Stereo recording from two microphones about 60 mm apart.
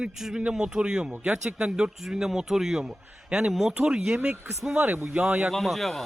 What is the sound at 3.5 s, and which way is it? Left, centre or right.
A man's voice, centre.